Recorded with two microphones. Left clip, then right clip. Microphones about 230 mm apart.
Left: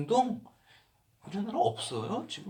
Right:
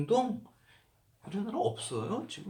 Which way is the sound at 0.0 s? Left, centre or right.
Centre.